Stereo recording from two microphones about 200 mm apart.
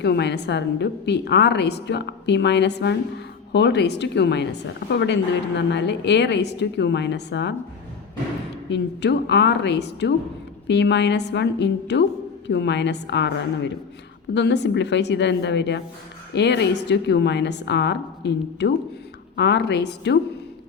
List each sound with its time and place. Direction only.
0.0 s a woman's voice: 55° left (ahead or behind)
8.7 s a woman's voice: 60° left (ahead or behind)